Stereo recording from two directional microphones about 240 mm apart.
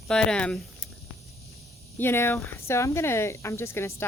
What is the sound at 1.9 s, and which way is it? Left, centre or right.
Speech, centre.